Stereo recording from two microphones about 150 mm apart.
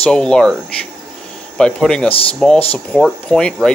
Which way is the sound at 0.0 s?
5° left (ahead or behind).